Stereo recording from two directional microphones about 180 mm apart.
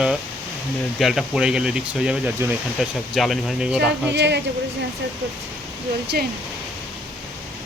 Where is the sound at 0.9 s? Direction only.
Centre (ahead or behind).